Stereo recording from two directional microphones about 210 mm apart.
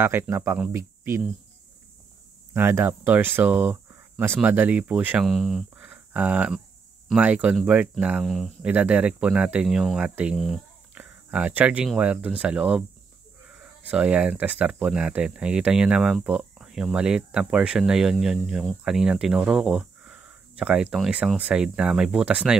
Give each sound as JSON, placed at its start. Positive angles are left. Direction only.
{"t": 0.0, "sound": "speech", "side_deg": -10}
{"t": 2.5, "sound": "speech", "side_deg": -10}
{"t": 13.8, "sound": "speech", "side_deg": -5}